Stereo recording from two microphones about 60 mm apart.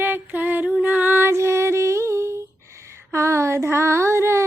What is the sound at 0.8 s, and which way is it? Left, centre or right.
Music, right.